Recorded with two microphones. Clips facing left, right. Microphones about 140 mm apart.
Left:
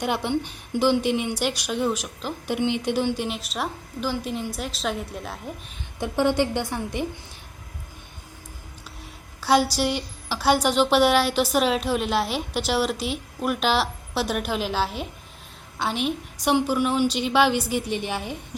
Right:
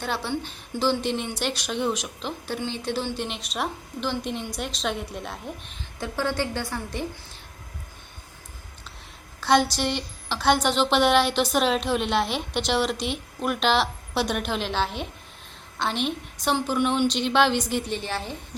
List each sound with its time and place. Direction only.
0.0 s a woman's voice: 15° left (ahead or behind)
2.5 s a woman's voice: 15° left (ahead or behind)
6.0 s a woman's voice: 15° left (ahead or behind)
9.4 s a woman's voice: 10° left (ahead or behind)